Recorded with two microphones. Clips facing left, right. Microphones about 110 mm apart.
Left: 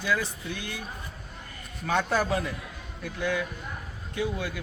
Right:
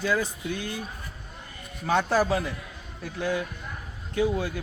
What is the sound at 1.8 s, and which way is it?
Speech, 25° right (ahead or behind).